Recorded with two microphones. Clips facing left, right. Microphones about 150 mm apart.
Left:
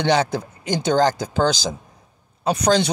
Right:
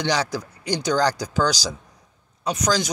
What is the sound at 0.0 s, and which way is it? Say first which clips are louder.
A man's voice: left 5 dB; 25° left (ahead or behind).